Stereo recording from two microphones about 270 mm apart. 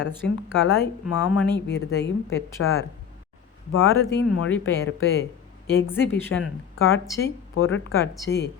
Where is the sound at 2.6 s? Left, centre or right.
Left.